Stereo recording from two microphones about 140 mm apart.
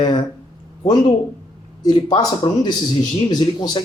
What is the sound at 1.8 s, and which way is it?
Speech, 30° left (ahead or behind).